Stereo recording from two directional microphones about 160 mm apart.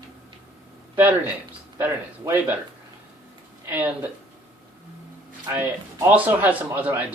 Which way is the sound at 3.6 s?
10° right (ahead or behind).